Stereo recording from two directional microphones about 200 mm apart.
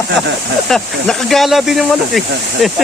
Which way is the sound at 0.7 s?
Centre (ahead or behind).